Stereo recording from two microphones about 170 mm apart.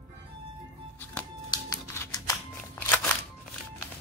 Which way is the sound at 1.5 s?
20° left (ahead or behind).